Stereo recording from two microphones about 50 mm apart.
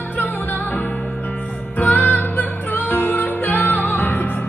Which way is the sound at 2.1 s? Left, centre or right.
Left.